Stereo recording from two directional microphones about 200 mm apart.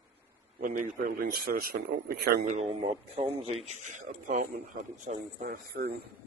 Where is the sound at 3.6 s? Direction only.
35° right (ahead or behind).